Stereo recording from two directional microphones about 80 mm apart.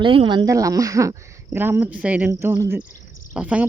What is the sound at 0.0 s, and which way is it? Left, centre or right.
Speech, right.